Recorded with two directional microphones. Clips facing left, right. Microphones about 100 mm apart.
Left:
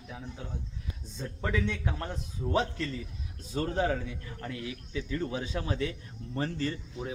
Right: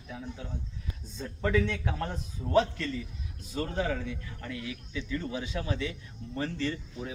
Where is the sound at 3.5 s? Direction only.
30° left (ahead or behind).